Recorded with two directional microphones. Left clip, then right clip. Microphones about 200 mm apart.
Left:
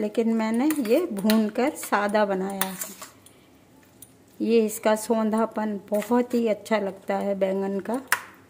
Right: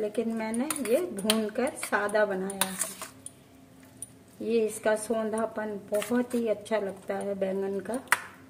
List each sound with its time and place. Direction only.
0.0 s speech: 50° left (ahead or behind)
4.4 s speech: 50° left (ahead or behind)